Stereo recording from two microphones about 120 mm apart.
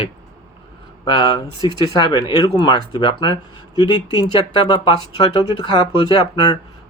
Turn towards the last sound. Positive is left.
turn(degrees=35)  # may be behind; listen again after turning